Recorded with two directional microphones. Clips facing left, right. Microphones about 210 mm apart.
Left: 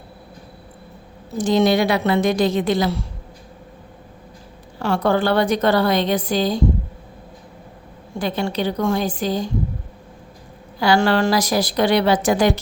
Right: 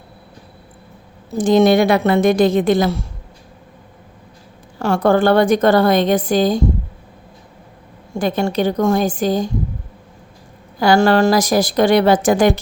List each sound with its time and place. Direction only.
1.4 s a woman's voice: 50° right (ahead or behind)
4.8 s a woman's voice: 45° right (ahead or behind)
8.2 s a woman's voice: 45° right (ahead or behind)
10.8 s a woman's voice: 45° right (ahead or behind)